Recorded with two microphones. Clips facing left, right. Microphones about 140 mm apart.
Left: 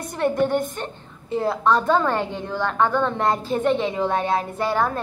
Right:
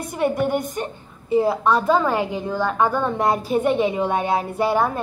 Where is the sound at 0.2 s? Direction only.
10° right (ahead or behind).